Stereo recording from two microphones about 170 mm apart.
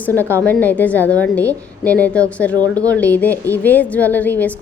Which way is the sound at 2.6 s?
20° right (ahead or behind).